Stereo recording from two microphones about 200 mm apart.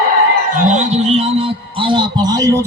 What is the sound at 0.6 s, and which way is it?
A man's voice, 35° right (ahead or behind).